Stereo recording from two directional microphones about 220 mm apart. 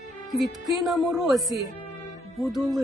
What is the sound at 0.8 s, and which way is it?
Speech, centre (ahead or behind).